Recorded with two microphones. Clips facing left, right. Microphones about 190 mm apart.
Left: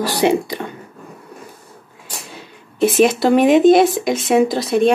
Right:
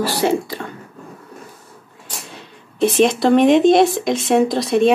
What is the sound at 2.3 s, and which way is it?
Speech, 5° left (ahead or behind).